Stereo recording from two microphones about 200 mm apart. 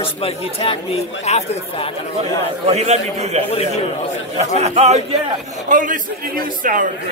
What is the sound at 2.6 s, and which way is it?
Speech, 35° right (ahead or behind).